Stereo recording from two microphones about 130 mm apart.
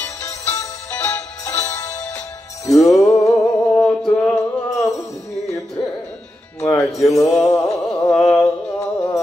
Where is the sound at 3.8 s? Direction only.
10° left (ahead or behind).